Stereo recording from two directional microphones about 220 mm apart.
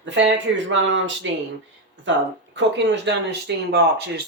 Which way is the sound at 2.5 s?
55° right (ahead or behind).